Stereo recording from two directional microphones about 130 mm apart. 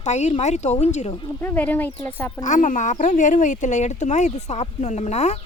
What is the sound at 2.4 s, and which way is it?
Speech, 75° left (ahead or behind).